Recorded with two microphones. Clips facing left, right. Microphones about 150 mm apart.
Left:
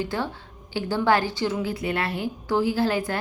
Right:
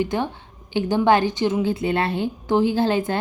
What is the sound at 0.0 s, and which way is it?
A woman's voice, 20° right (ahead or behind).